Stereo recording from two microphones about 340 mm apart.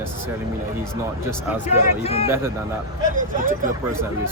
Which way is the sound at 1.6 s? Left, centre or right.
Centre.